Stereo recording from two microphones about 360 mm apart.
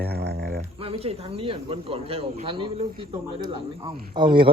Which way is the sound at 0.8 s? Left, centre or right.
Centre.